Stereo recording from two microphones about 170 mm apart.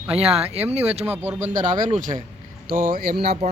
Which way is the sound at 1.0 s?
10° right (ahead or behind).